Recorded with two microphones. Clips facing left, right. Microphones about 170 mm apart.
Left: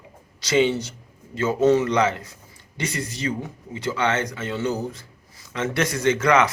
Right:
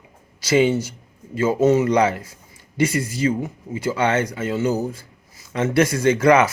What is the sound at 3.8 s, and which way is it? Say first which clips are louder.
Speech: right 3 dB; 25° right (ahead or behind).